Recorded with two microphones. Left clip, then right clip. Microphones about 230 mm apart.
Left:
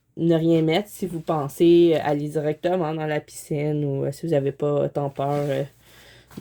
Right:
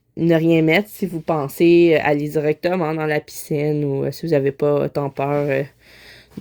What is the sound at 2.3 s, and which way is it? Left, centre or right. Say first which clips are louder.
Speech: right 4 dB; right.